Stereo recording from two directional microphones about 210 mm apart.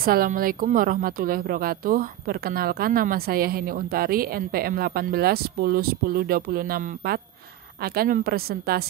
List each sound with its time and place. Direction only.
0.0 s a woman's voice: 45° right (ahead or behind)